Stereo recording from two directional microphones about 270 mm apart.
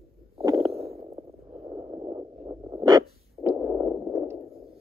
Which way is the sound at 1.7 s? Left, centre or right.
Centre.